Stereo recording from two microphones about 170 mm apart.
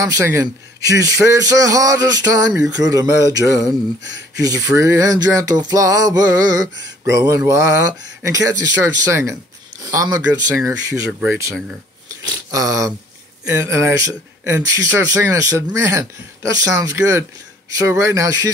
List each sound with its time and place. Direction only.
0.0 s a man's voice: 20° right (ahead or behind)